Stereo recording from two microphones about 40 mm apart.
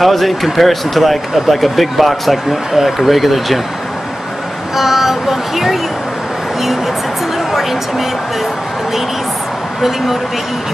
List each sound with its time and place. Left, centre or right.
0.0 s speech: centre
4.7 s speech: centre
9.8 s speech: centre